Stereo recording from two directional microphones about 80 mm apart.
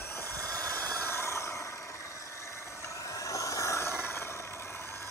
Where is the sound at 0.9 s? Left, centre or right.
Left.